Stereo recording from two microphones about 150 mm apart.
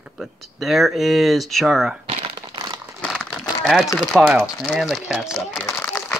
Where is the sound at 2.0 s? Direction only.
35° right (ahead or behind).